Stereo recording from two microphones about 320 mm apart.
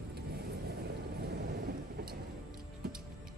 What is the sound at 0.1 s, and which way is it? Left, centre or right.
Vehicle, right.